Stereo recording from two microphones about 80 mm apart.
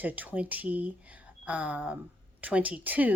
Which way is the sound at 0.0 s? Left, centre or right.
Right.